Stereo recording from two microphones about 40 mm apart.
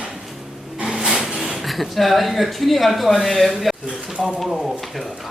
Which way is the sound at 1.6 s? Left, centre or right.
Centre.